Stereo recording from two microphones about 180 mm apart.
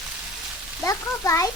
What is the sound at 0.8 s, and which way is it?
Speech, 20° left (ahead or behind).